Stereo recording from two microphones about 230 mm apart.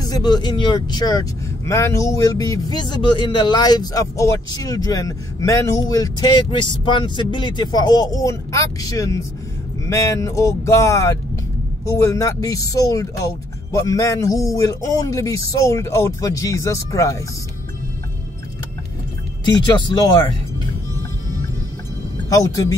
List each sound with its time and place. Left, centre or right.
0.0 s speech: centre
19.4 s speech: centre
22.3 s speech: centre